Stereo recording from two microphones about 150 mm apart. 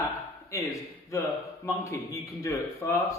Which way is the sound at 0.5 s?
20° left (ahead or behind).